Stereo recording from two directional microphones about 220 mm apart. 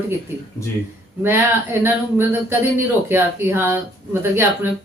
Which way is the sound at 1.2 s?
10° right (ahead or behind).